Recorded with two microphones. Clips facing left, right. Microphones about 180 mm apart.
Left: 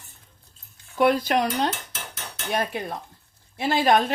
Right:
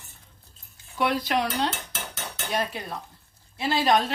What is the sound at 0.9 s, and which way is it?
Speech, 50° left (ahead or behind).